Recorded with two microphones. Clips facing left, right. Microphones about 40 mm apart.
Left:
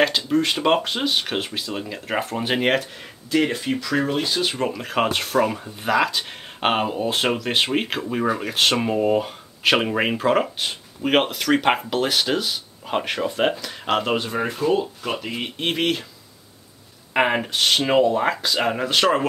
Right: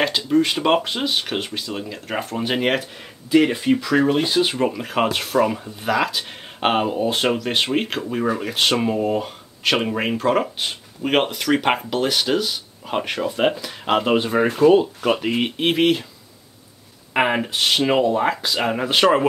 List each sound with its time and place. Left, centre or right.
0.0 s speech: centre
14.1 s speech: centre
14.7 s speech: right
15.6 s speech: centre
17.1 s speech: centre